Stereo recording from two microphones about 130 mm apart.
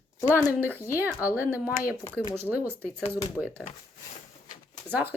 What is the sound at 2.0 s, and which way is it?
Speech, 25° left (ahead or behind).